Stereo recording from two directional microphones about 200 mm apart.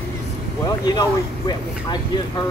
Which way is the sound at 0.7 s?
20° left (ahead or behind).